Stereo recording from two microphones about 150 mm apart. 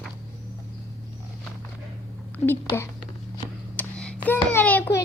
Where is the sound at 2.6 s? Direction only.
15° left (ahead or behind).